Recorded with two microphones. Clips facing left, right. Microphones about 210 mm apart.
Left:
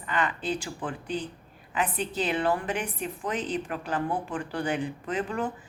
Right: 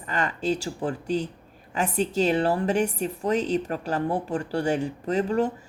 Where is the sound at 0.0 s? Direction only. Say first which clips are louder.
Right 2 dB; 45° right (ahead or behind).